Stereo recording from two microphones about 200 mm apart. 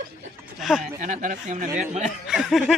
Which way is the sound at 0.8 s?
40° right (ahead or behind).